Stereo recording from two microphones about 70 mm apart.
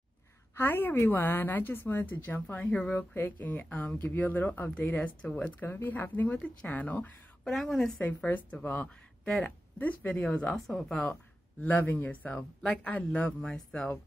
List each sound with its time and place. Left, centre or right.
0.6 s a woman's voice: left
7.4 s a woman's voice: centre
8.0 s a woman's voice: left
10.5 s speech: centre
11.6 s a woman's voice: left
12.4 s speech: centre
12.8 s speech: centre